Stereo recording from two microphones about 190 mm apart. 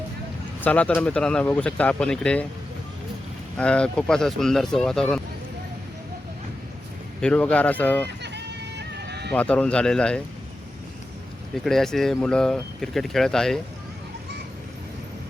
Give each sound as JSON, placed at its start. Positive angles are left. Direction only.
{"t": 0.6, "sound": "speech", "side_deg": 5}
{"t": 3.6, "sound": "speech", "side_deg": 5}
{"t": 7.2, "sound": "speech", "side_deg": 5}
{"t": 8.2, "sound": "run", "side_deg": -65}
{"t": 9.3, "sound": "speech", "side_deg": 5}
{"t": 11.5, "sound": "speech", "side_deg": 0}